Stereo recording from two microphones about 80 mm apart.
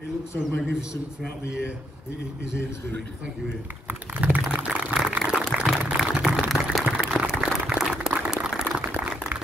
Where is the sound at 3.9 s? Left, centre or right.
Centre.